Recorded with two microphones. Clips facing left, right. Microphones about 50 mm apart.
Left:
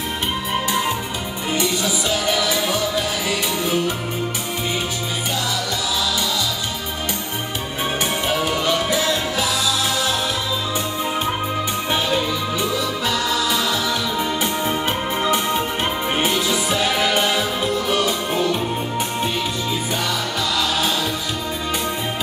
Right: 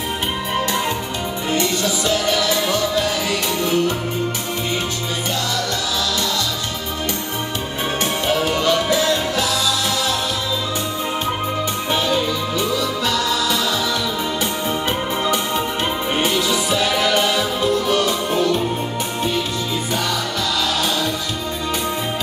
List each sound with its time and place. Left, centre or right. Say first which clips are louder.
1.5 s music: right 1 dB; centre
8.4 s music: right 3 dB; centre
11.9 s music: right 2 dB; centre
16.2 s music: right 2 dB; centre